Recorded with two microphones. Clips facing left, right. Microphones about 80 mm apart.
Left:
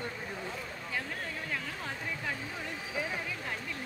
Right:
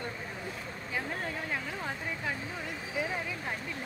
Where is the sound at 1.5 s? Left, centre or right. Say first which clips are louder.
Right 2 dB; centre.